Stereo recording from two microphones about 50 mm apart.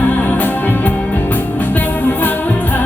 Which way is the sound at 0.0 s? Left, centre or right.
Left.